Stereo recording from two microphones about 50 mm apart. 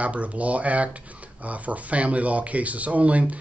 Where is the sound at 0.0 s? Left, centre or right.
Right.